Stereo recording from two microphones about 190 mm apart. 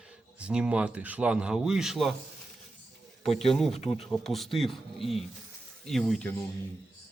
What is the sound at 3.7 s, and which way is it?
Speech, 35° left (ahead or behind).